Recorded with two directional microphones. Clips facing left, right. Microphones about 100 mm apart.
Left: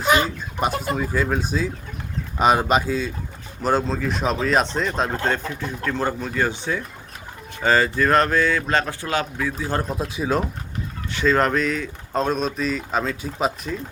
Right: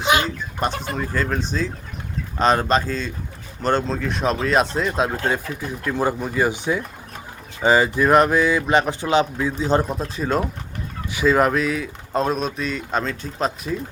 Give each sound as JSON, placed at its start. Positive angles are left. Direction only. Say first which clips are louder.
{"t": 0.0, "sound": "a man's voice", "louder": "even", "side_deg": 0}
{"t": 9.8, "sound": "speech", "louder": "even", "side_deg": 0}
{"t": 11.1, "sound": "speech", "louder": "right 2 dB", "side_deg": -10}